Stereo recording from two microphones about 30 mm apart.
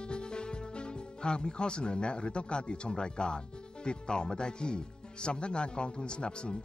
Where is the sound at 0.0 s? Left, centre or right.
Left.